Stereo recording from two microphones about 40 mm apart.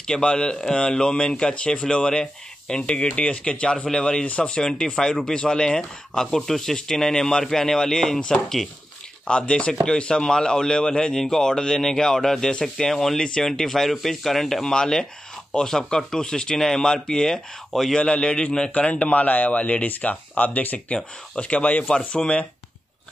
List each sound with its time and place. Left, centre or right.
0.0 s speech: left
9.2 s speech: left
13.5 s speech: centre
14.6 s speech: centre
17.9 s speech: left
18.7 s speech: left
19.2 s speech: left
21.9 s speech: left